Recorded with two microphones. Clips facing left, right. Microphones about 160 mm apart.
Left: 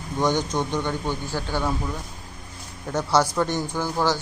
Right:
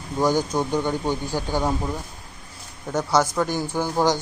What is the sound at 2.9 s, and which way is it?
Speech, 5° right (ahead or behind).